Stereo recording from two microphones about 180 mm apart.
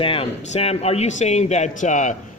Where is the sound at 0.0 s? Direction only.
30° left (ahead or behind).